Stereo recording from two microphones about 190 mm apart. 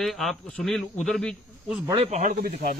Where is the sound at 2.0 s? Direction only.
40° right (ahead or behind).